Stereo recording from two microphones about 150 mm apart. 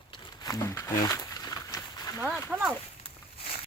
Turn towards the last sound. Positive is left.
turn(degrees=40)  # may be behind; listen again after turning